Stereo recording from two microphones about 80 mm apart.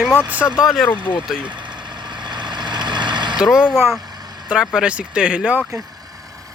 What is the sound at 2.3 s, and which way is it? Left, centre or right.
Vehicle, right.